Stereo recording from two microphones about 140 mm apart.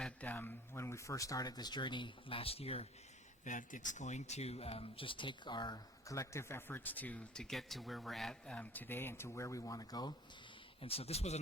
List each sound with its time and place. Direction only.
0.0 s speech: 10° left (ahead or behind); by 2.8 s 45° left (ahead or behind)
3.4 s speech: 65° left (ahead or behind); by 10.2 s 30° left (ahead or behind)
10.8 s speech: 45° left (ahead or behind)